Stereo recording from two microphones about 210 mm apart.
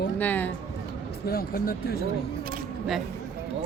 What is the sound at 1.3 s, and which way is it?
Speech, 45° left (ahead or behind).